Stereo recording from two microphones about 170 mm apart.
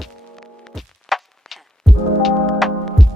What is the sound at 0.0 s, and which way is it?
Music, centre (ahead or behind).